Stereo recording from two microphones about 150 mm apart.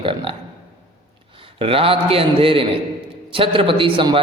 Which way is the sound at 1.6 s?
40° right (ahead or behind).